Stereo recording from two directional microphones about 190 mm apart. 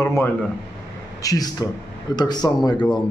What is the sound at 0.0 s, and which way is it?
Speech, 15° left (ahead or behind).